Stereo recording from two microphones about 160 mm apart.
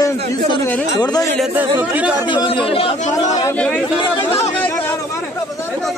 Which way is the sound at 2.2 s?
30° left (ahead or behind).